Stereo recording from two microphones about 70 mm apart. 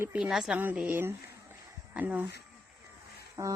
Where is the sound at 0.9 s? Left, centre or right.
Right.